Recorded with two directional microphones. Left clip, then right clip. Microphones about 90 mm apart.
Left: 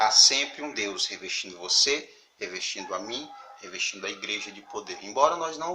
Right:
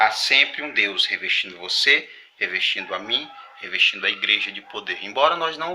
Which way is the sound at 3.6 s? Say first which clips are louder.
Right 12 dB; 30° left (ahead or behind).